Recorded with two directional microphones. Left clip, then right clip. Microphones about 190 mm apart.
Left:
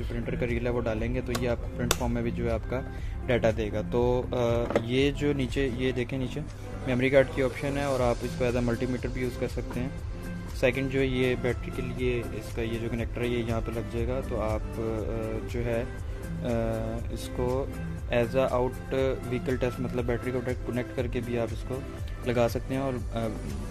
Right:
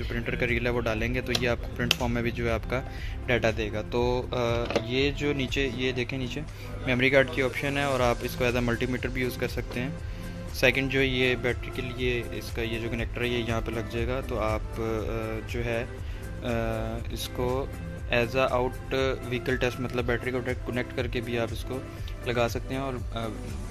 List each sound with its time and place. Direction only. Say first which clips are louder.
0.1 s speech: right 4 dB; centre (ahead or behind)
3.3 s speech: even; 15° left (ahead or behind)
22.2 s speech: left 1 dB; 20° left (ahead or behind)